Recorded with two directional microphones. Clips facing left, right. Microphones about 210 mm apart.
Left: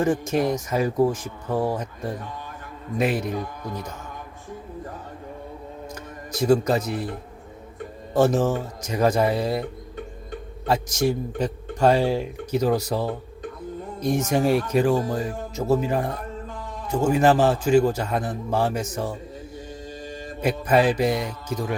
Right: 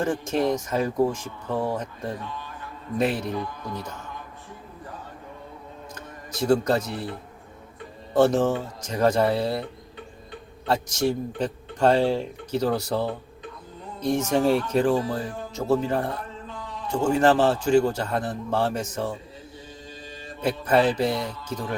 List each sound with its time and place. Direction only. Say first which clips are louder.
0.1 s speech: left 2 dB; 10° left (ahead or behind)
5.9 s music: left 4 dB; 10° left (ahead or behind)
8.1 s speech: even; 5° left (ahead or behind)
10.7 s speech: left 1 dB; 10° left (ahead or behind)
16.5 s a sound: left 2 dB; 45° left (ahead or behind)
16.9 s speech: left 1 dB; 10° left (ahead or behind)
20.4 s speech: left 1 dB; 10° left (ahead or behind)